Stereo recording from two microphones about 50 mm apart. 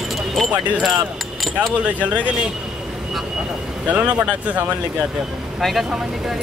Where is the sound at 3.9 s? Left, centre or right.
Right.